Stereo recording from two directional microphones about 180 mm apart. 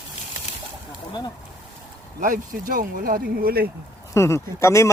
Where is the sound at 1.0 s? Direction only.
25° left (ahead or behind).